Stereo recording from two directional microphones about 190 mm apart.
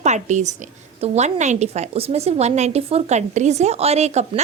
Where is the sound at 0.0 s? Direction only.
40° right (ahead or behind).